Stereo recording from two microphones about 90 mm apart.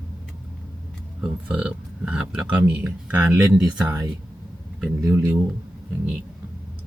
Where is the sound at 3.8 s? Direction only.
20° right (ahead or behind).